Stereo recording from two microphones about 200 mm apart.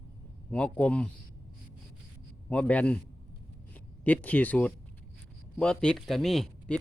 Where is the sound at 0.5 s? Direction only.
5° left (ahead or behind).